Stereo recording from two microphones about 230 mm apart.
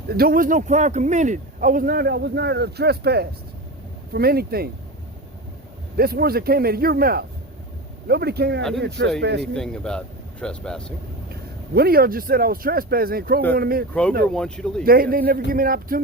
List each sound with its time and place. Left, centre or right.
0.1 s a man's voice: right
6.0 s a man's voice: right
9.6 s speech: centre
11.7 s a man's voice: right
14.3 s speech: centre
14.8 s a man's voice: right